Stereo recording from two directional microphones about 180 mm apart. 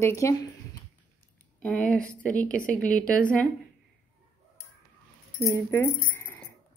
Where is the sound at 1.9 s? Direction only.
5° left (ahead or behind).